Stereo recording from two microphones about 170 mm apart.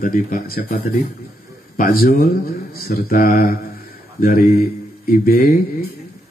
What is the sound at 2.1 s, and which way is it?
Speech, 60° left (ahead or behind).